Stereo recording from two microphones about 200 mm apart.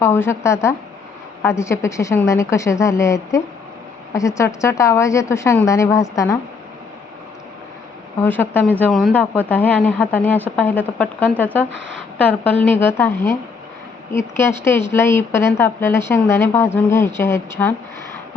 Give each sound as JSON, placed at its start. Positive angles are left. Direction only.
{"t": 0.0, "sound": "speech", "side_deg": 10}
{"t": 8.2, "sound": "speech", "side_deg": 10}
{"t": 11.7, "sound": "a woman's voice", "side_deg": -65}
{"t": 12.1, "sound": "speech", "side_deg": 10}